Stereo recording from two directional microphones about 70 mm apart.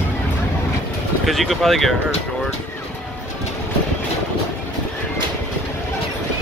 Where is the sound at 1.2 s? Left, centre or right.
Centre.